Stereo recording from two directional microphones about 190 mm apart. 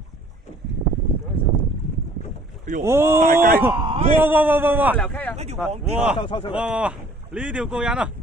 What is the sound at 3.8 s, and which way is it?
Speech, 30° right (ahead or behind).